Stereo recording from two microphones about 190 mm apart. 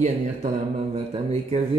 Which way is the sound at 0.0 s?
35° right (ahead or behind).